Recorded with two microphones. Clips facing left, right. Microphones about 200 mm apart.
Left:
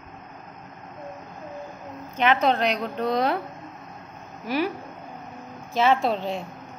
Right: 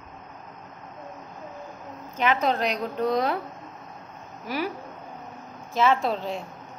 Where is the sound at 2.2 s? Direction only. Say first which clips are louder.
Left 3 dB; 70° left (ahead or behind).